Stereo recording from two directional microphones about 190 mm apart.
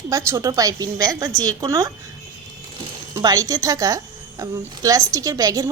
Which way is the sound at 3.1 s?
20° right (ahead or behind).